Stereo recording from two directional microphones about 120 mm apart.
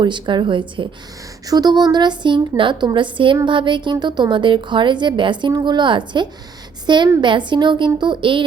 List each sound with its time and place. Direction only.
0.0 s speech: 40° right (ahead or behind)
1.5 s a woman's voice: 35° right (ahead or behind)